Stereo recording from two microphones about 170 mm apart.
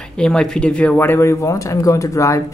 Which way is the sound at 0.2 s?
5° left (ahead or behind).